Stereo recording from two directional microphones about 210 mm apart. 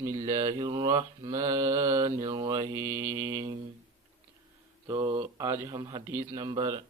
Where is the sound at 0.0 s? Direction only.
15° right (ahead or behind).